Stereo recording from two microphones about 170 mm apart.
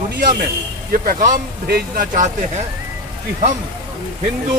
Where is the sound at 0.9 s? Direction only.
55° right (ahead or behind).